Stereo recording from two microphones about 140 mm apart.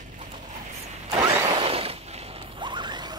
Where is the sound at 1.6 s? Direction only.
45° right (ahead or behind).